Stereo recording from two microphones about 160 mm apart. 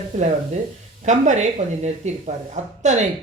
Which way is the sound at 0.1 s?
50° right (ahead or behind).